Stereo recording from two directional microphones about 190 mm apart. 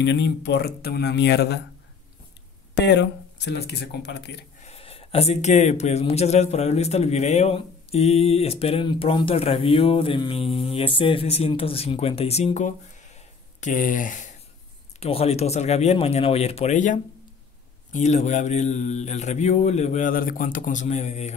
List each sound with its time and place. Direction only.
0.0 s speech: 65° left (ahead or behind)
2.7 s speech: 65° left (ahead or behind)
4.6 s a man's voice: 35° left (ahead or behind)
15.0 s a man's voice: 30° left (ahead or behind)